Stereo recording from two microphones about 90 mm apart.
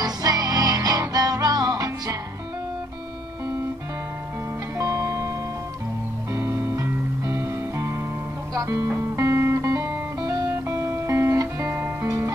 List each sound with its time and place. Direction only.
0.0 s music: 40° right (ahead or behind)
4.7 s music: 35° right (ahead or behind)
6.3 s music: 30° right (ahead or behind)